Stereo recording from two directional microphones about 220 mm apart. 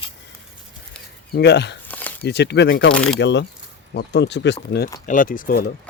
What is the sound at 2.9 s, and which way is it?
Speech, 5° left (ahead or behind).